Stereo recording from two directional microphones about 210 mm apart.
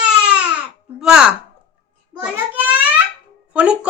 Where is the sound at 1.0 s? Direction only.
5° right (ahead or behind).